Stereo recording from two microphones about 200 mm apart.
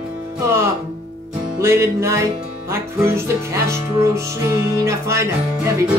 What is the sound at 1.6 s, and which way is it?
Music, 15° right (ahead or behind).